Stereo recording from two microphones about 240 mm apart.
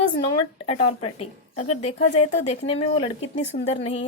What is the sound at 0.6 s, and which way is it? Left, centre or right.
Speech, left.